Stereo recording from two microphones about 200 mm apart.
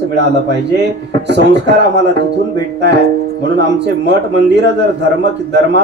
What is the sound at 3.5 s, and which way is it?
Speech, 60° right (ahead or behind).